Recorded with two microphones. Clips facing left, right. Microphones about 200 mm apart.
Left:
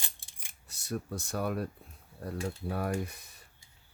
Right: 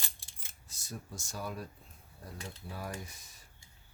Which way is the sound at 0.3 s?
15° left (ahead or behind).